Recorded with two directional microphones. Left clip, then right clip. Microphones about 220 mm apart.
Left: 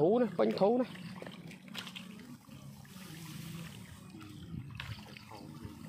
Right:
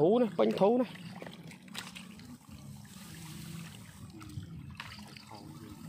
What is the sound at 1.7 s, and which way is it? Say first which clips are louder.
Water: even; 25° right (ahead or behind).